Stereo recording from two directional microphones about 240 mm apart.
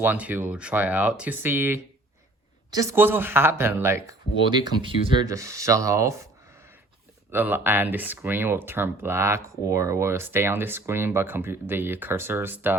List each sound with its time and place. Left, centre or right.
0.0 s speech: centre
7.3 s speech: centre